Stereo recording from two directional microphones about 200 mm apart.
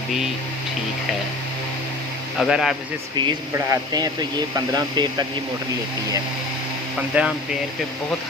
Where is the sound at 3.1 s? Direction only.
25° right (ahead or behind).